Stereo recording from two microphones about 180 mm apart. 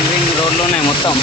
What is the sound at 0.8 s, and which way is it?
Speech, 25° left (ahead or behind).